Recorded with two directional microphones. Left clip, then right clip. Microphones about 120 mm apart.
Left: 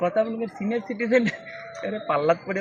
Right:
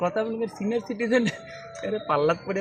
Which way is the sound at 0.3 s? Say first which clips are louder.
Even; 10° right (ahead or behind).